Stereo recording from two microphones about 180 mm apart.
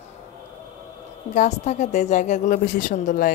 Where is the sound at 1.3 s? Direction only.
40° left (ahead or behind).